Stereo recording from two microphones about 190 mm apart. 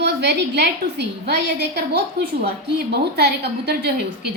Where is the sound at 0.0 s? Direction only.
65° right (ahead or behind).